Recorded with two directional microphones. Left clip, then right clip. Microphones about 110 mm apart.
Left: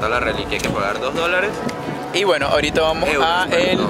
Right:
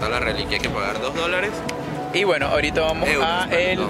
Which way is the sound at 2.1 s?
10° left (ahead or behind).